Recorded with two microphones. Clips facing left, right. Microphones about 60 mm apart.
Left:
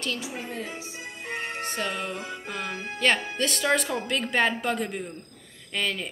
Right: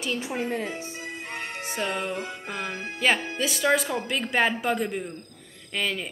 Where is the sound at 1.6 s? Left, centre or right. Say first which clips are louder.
Right 4 dB; centre.